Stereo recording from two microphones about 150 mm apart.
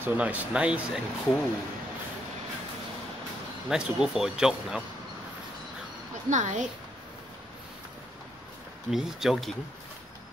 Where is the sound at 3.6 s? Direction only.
5° right (ahead or behind).